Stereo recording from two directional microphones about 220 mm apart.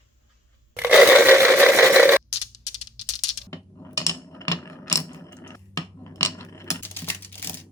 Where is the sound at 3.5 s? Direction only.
15° left (ahead or behind).